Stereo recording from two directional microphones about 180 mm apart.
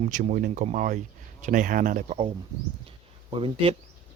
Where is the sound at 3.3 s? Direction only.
30° right (ahead or behind).